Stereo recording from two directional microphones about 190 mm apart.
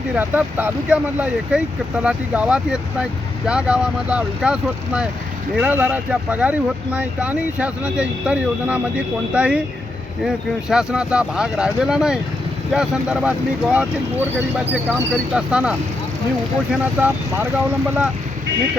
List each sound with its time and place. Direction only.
0.2 s speech: 10° right (ahead or behind)
17.0 s speech: 10° right (ahead or behind)